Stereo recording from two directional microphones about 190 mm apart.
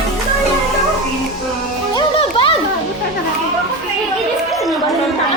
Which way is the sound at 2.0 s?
25° left (ahead or behind).